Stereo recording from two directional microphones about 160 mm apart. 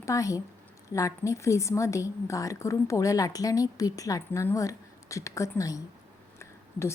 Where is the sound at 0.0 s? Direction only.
20° left (ahead or behind).